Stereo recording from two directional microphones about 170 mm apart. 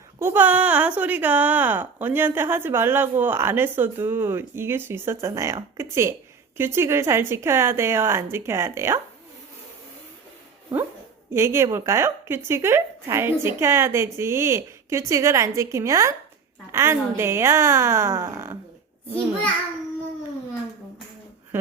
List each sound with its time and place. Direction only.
0.2 s speech: 10° right (ahead or behind)
11.3 s speech: 15° right (ahead or behind)